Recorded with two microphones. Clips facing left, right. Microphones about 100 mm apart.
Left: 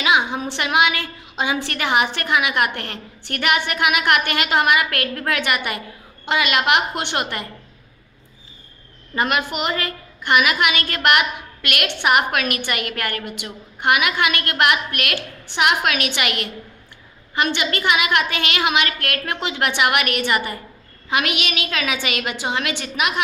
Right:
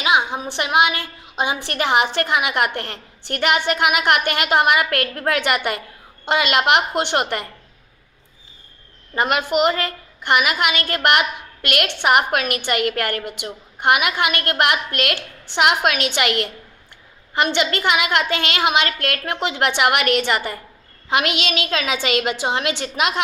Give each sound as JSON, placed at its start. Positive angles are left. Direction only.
{"t": 0.0, "sound": "a woman's voice", "side_deg": -20}
{"t": 9.2, "sound": "a woman's voice", "side_deg": -25}
{"t": 17.7, "sound": "a woman's voice", "side_deg": -25}